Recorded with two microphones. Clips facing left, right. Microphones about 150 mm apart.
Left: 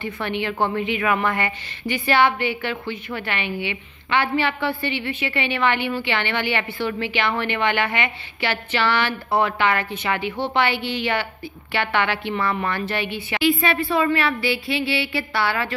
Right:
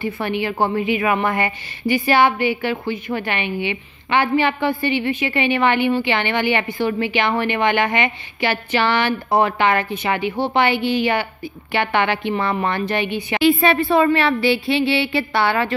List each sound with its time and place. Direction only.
0.0 s a woman's voice: 10° right (ahead or behind); by 13.8 s 30° right (ahead or behind)
13.8 s a woman's voice: 45° right (ahead or behind)
14.1 s a woman's voice: 30° right (ahead or behind)